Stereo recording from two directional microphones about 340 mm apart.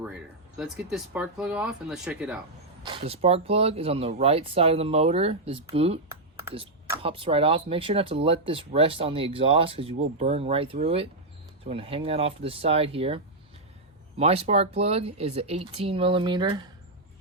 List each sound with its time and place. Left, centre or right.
0.5 s speech: centre
2.8 s speech: centre